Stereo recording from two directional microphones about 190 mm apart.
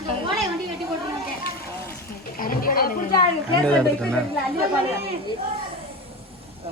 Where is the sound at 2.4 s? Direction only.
50° left (ahead or behind).